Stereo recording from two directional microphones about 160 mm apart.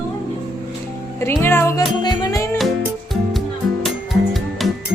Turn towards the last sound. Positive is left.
turn(degrees=0)  # may be behind; listen again after turning